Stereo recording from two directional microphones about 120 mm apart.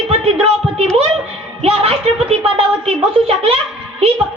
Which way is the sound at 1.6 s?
55° right (ahead or behind).